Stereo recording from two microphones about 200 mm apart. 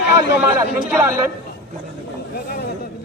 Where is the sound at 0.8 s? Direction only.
5° right (ahead or behind).